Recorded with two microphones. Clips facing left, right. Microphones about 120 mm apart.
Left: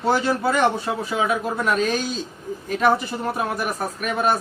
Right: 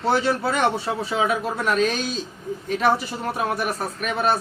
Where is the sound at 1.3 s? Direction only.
Centre (ahead or behind).